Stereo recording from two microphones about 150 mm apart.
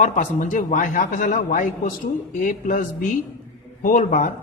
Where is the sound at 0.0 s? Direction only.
60° left (ahead or behind).